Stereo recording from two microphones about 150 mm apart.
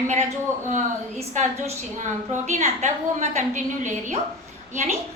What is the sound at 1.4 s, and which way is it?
A woman's voice, 55° right (ahead or behind).